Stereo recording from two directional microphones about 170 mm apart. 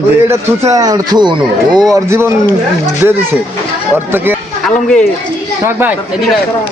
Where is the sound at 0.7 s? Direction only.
20° right (ahead or behind).